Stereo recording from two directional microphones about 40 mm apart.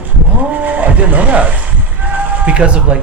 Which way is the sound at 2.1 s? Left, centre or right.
Right.